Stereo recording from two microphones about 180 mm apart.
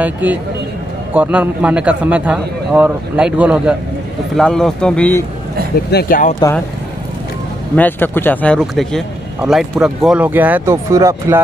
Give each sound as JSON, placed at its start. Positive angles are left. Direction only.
{"t": 0.0, "sound": "a man's voice", "side_deg": -10}
{"t": 4.4, "sound": "speech", "side_deg": 5}
{"t": 5.9, "sound": "speech", "side_deg": 55}
{"t": 7.7, "sound": "speech", "side_deg": 10}